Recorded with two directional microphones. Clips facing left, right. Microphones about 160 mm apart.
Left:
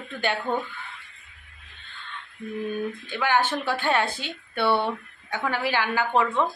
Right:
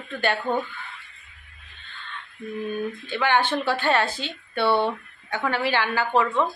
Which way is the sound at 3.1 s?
10° left (ahead or behind).